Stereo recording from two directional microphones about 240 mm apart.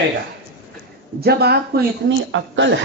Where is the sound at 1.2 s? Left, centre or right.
Right.